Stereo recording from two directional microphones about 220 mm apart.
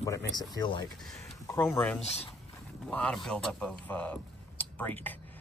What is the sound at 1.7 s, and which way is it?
Speech, 5° left (ahead or behind).